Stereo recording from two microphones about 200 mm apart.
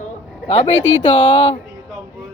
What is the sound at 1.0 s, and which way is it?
Speech, 25° left (ahead or behind).